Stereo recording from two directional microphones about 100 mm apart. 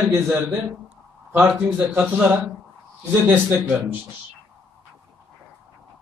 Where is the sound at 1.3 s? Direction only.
25° right (ahead or behind).